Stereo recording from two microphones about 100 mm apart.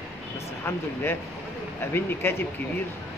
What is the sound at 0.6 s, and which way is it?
Speech, 25° left (ahead or behind).